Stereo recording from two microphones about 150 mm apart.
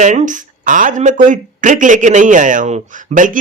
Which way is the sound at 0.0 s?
55° right (ahead or behind).